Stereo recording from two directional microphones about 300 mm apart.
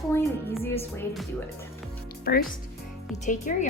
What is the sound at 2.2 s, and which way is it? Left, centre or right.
A woman's voice, left.